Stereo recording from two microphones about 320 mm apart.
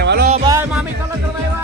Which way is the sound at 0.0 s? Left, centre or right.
Right.